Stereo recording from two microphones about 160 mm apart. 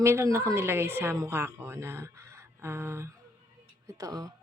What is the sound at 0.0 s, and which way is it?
A woman's voice, 15° right (ahead or behind).